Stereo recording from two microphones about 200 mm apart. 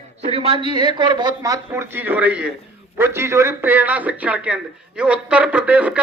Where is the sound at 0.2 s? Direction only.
30° right (ahead or behind).